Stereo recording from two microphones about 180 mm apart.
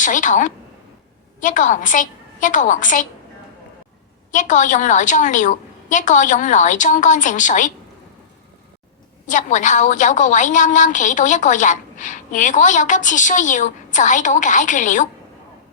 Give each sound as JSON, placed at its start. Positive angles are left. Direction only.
{"t": 0.0, "sound": "a woman's voice", "side_deg": 45}
{"t": 4.3, "sound": "a woman's voice", "side_deg": 45}
{"t": 9.2, "sound": "a woman's voice", "side_deg": 45}